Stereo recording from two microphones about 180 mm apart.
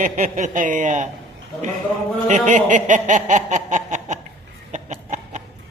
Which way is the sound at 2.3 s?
40° right (ahead or behind).